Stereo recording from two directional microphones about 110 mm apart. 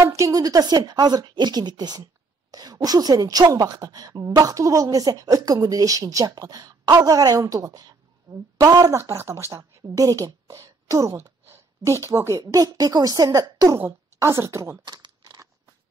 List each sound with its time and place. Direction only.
0.0 s a woman's voice: 30° right (ahead or behind)
15.0 s crumpling: 35° right (ahead or behind)